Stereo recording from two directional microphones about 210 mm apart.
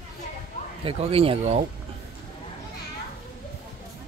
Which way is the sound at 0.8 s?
25° right (ahead or behind).